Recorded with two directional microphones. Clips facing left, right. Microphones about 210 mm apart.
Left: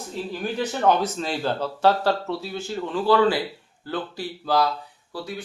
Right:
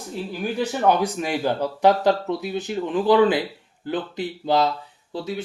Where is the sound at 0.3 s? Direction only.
10° right (ahead or behind).